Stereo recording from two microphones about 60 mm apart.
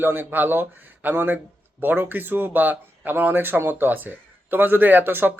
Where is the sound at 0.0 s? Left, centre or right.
Right.